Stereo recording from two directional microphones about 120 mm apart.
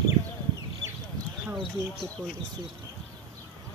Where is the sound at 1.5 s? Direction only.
Centre (ahead or behind).